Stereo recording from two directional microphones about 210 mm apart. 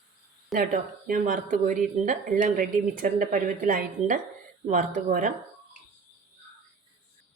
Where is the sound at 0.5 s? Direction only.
40° right (ahead or behind).